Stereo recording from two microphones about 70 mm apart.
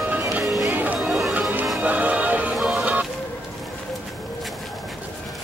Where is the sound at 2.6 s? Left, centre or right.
Centre.